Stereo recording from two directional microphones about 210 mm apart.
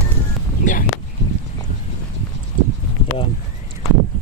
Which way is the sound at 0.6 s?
40° left (ahead or behind).